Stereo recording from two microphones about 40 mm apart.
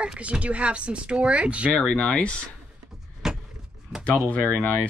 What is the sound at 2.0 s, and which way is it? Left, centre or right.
Speech, left.